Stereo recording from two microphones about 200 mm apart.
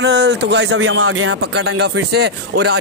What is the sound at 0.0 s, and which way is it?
Speech, 60° right (ahead or behind).